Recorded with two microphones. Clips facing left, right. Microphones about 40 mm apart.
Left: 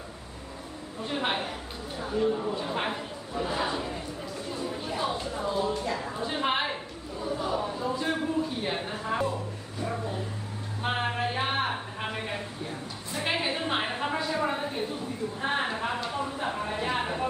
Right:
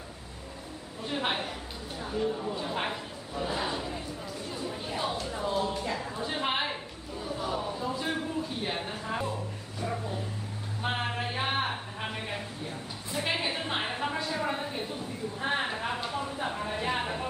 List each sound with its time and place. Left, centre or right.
1.0 s a woman's voice: centre
2.2 s speech: centre
2.6 s speech: centre
4.5 s chatter: centre
5.7 s a sound: centre